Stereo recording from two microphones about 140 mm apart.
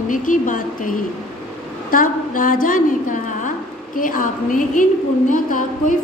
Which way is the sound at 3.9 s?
75° left (ahead or behind).